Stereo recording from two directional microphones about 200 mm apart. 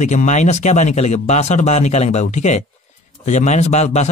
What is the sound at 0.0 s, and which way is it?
A man's voice, 35° left (ahead or behind).